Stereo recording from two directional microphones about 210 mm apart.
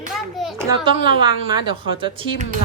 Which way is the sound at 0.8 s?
25° right (ahead or behind).